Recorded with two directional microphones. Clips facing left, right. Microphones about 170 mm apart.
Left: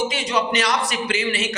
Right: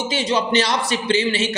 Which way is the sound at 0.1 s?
30° right (ahead or behind).